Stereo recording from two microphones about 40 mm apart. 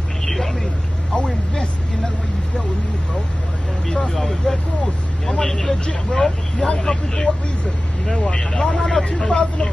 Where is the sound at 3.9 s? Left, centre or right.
Centre.